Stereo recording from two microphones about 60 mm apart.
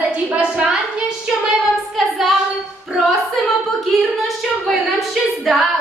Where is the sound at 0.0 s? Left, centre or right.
Right.